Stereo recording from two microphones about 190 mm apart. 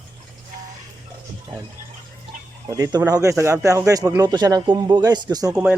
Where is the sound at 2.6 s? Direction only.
20° right (ahead or behind).